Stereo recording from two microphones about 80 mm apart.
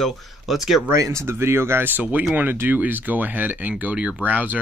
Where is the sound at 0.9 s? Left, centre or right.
Right.